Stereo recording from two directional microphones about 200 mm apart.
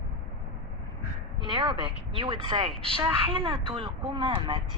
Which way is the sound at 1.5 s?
25° right (ahead or behind).